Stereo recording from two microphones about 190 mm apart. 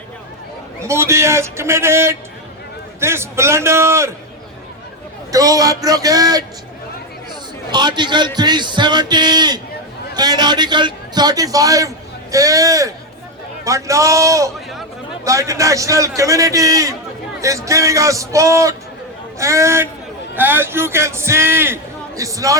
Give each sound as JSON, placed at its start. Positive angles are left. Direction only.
{"t": 0.9, "sound": "a man's voice", "side_deg": -15}
{"t": 5.3, "sound": "a man's voice", "side_deg": -20}
{"t": 7.7, "sound": "a man's voice", "side_deg": -25}